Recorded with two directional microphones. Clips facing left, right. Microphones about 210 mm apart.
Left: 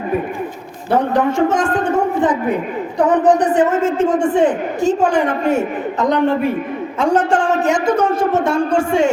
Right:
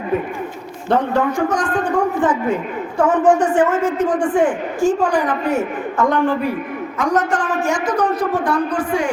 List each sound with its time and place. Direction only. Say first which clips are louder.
1.4 s a woman's voice: left 3 dB; 25° left (ahead or behind)
3.2 s speech: even; 35° left (ahead or behind)
3.5 s a woman's voice: left 2 dB; 20° left (ahead or behind)